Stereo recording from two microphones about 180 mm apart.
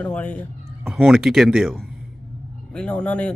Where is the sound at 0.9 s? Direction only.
5° right (ahead or behind).